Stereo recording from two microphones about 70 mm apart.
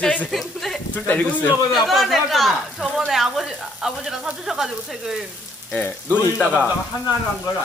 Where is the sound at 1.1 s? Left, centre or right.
Left.